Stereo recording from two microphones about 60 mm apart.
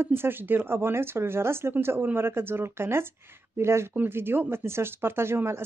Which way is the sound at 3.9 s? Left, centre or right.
Right.